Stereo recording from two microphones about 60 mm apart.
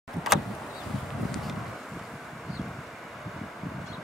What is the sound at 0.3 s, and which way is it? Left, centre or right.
Vehicle, centre.